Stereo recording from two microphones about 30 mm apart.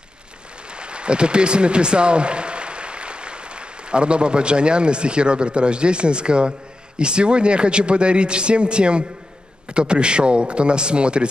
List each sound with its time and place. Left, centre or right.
0.7 s a man's voice: right